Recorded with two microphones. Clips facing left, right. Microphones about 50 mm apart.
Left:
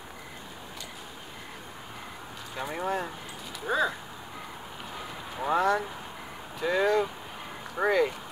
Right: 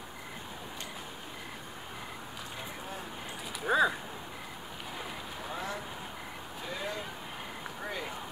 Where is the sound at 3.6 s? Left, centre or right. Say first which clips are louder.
Right 1 dB; centre.